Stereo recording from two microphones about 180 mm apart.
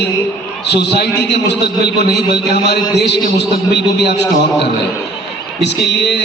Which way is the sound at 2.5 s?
65° left (ahead or behind).